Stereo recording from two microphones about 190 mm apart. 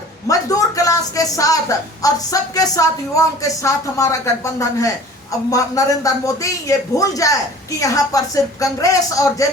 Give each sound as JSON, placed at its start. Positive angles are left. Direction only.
{"t": 0.3, "sound": "speech", "side_deg": 20}